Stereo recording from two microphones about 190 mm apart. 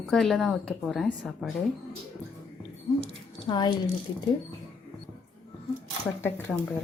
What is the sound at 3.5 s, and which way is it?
Speech, 20° left (ahead or behind).